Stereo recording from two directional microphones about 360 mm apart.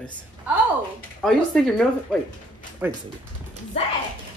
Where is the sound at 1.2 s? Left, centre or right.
Centre.